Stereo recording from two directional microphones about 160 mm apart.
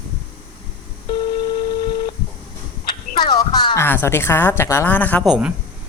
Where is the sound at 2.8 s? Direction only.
25° left (ahead or behind).